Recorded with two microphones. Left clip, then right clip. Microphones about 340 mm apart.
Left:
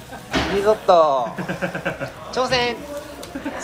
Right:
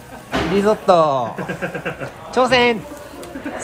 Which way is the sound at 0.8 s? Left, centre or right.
Right.